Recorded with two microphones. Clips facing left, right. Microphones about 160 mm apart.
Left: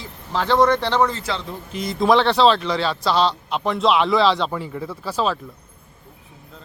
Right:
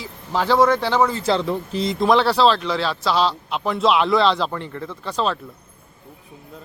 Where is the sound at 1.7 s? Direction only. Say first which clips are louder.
Right 1 dB; 25° right (ahead or behind).